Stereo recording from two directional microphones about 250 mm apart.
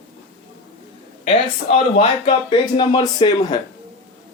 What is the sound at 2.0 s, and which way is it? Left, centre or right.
Speech, left.